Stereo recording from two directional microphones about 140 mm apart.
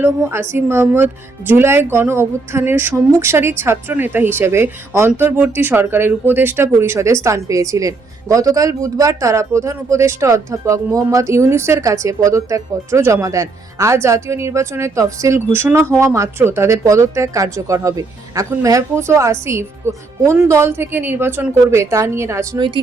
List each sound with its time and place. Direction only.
0.0 s speech: 15° right (ahead or behind)